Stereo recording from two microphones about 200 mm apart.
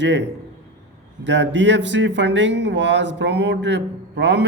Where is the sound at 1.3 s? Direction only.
65° right (ahead or behind).